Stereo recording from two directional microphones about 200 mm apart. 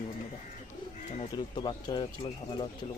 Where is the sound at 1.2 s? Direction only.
25° left (ahead or behind).